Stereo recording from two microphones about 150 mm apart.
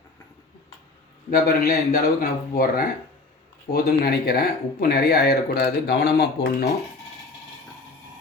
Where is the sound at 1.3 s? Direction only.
80° left.